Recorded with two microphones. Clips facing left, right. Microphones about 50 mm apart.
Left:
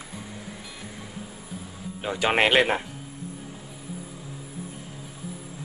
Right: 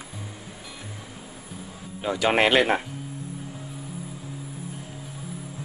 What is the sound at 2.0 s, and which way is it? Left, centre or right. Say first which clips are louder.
Speech: right 1 dB; centre.